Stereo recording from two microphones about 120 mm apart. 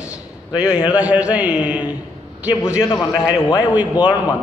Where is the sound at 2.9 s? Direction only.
35° left (ahead or behind).